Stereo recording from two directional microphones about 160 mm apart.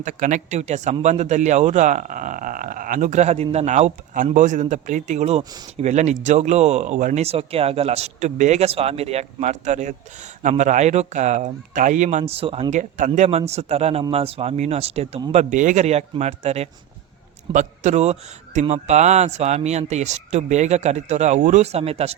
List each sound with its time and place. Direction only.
0.0 s speech: 55° right (ahead or behind)
5.4 s speech: 25° right (ahead or behind)
5.7 s speech: 45° right (ahead or behind)
12.7 s speech: 50° right (ahead or behind)
13.1 s speech: 40° right (ahead or behind)